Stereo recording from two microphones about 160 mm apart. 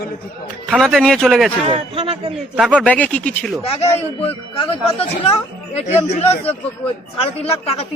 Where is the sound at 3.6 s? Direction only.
40° left (ahead or behind).